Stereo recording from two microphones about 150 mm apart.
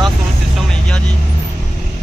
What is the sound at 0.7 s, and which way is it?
Speech, 5° left (ahead or behind).